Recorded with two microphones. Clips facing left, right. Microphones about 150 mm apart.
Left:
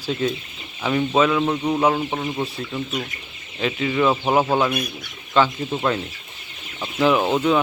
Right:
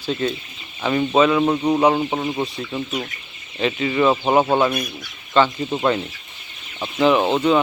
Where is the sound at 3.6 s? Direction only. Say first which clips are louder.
Right 2 dB; centre (ahead or behind).